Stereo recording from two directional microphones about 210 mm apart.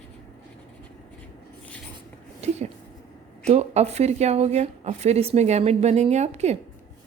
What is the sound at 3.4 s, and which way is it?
Speech, 30° right (ahead or behind).